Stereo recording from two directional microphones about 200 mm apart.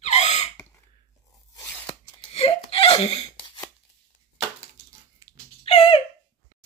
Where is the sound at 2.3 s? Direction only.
30° left (ahead or behind).